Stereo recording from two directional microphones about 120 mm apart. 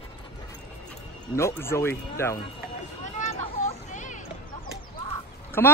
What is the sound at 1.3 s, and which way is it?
Speech, 20° left (ahead or behind).